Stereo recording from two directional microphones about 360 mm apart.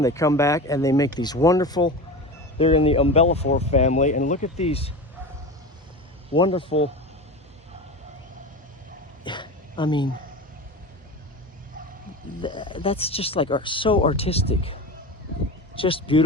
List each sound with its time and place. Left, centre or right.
0.0 s speech: centre
6.3 s speech: centre
9.2 s dog: centre
12.4 s speech: centre